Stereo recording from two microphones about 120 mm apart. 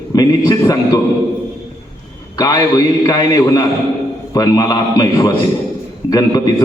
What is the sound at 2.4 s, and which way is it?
A man's voice, 35° left (ahead or behind).